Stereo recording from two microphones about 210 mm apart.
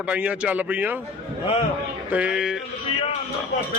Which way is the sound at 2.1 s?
5° right (ahead or behind).